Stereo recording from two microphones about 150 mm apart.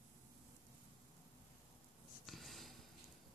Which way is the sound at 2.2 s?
Centre (ahead or behind).